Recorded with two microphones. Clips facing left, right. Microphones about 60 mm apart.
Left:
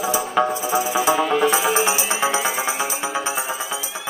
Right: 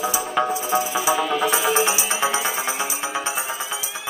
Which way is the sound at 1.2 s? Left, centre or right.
Centre.